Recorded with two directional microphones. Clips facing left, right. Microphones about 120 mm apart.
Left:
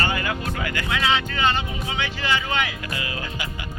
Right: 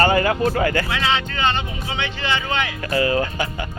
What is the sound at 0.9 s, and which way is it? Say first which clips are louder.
Speech: right 1 dB; 5° left (ahead or behind).